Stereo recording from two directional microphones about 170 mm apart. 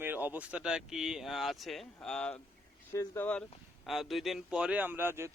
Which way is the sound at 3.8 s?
Centre (ahead or behind).